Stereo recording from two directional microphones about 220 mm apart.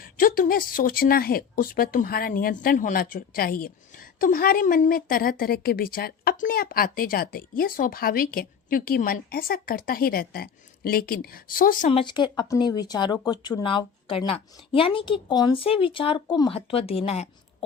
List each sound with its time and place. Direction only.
0.0 s a woman's voice: 40° left (ahead or behind)